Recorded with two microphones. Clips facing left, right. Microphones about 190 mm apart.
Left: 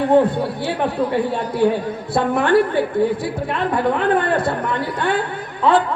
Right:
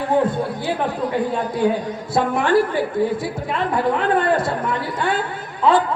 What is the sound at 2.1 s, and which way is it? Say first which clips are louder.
Speech: left 1 dB; 60° left (ahead or behind).